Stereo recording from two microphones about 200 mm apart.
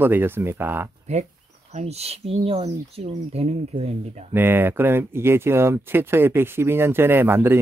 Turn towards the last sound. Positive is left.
turn(degrees=-10)  # may be behind; listen again after turning